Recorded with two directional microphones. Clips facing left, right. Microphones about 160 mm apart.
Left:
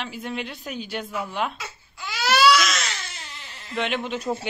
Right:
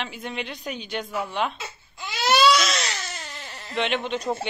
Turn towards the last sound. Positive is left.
turn(degrees=5)  # may be behind; listen again after turning